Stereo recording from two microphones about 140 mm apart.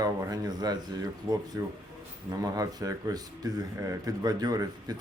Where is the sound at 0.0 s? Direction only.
25° right (ahead or behind).